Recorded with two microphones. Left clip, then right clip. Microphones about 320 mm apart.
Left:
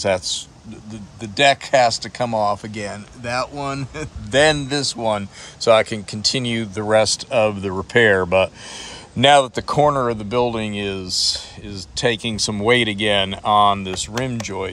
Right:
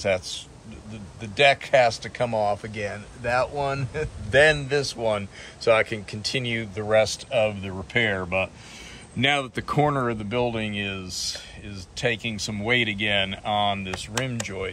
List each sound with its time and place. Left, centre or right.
0.0 s speech: centre
8.0 s speech: left
9.3 s speech: centre